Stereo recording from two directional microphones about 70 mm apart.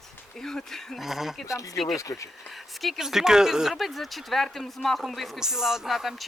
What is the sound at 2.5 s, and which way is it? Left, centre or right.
Speech, centre.